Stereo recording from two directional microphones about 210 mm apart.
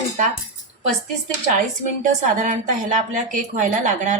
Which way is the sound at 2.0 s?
35° right (ahead or behind).